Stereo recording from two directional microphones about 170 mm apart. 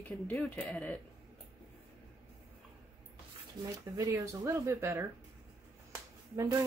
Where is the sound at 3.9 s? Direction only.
20° right (ahead or behind).